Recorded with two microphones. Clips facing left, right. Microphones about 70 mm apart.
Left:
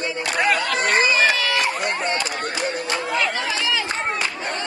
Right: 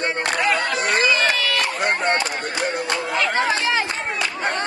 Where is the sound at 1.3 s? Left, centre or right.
Left.